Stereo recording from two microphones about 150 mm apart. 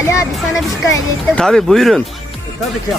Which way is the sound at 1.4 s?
5° left (ahead or behind).